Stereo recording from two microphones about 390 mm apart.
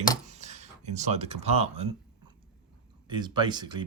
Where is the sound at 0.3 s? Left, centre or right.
Centre.